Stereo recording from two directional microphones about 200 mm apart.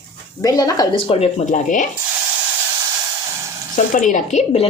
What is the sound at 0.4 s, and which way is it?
Speech, 20° left (ahead or behind).